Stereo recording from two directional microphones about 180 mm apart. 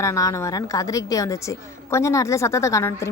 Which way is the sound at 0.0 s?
15° left (ahead or behind).